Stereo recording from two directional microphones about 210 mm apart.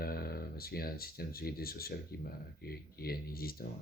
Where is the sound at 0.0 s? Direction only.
45° left (ahead or behind).